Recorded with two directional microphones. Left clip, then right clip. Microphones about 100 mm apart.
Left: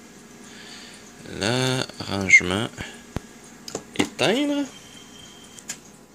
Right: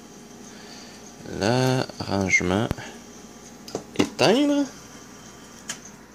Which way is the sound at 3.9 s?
5° right (ahead or behind).